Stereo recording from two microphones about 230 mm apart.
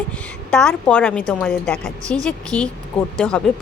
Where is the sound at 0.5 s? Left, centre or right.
Centre.